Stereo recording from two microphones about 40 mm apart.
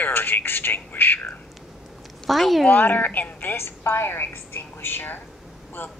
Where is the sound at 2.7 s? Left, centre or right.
Left.